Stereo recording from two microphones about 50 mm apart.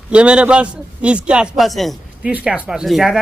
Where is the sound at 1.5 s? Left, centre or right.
Centre.